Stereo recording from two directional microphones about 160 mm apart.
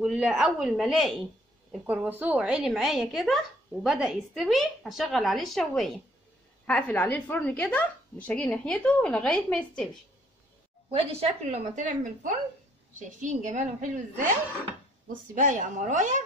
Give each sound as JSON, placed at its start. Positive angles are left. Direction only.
{"t": 0.0, "sound": "a woman's voice", "side_deg": 0}
{"t": 1.9, "sound": "a woman's voice", "side_deg": -10}
{"t": 11.0, "sound": "a woman's voice", "side_deg": -40}
{"t": 15.3, "sound": "a woman's voice", "side_deg": -55}